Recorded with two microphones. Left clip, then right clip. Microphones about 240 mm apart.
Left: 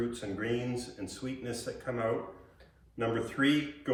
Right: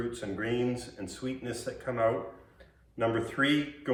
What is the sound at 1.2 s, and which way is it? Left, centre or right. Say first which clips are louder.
Speech: right 2 dB; centre.